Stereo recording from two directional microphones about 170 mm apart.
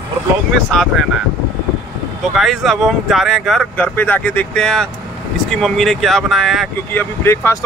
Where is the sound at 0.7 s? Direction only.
5° left (ahead or behind).